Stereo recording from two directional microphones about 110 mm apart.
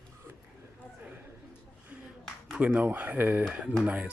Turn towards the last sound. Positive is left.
turn(degrees=-10)  # may be behind; listen again after turning